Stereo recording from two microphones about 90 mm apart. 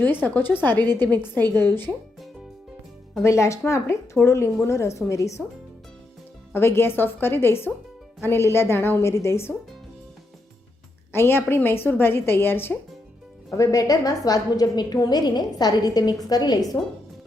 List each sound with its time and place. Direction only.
0.3 s a woman's voice: 20° left (ahead or behind)
0.7 s a woman's voice: 50° right (ahead or behind)
1.5 s a woman's voice: 25° left (ahead or behind)
3.2 s speech: 35° left (ahead or behind)
6.5 s a woman's voice: 25° left (ahead or behind)
11.1 s a woman's voice: 25° left (ahead or behind)
13.5 s a woman's voice: 40° left (ahead or behind)